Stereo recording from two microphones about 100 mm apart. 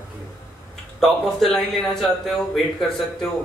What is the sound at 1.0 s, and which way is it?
A man's voice, centre (ahead or behind).